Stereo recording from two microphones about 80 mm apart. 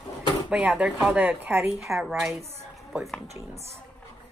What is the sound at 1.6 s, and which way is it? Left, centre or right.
Speech, centre.